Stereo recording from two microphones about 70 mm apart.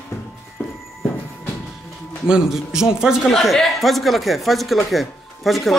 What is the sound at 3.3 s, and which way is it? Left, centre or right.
Speech, centre.